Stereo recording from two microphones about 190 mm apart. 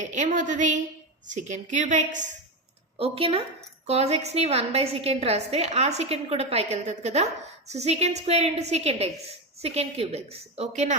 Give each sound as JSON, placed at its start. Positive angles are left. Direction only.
{"t": 0.0, "sound": "a woman's voice", "side_deg": -40}
{"t": 3.0, "sound": "a woman's voice", "side_deg": -30}